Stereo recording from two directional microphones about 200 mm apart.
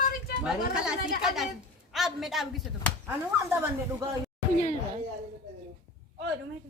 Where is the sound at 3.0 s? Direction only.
10° right (ahead or behind).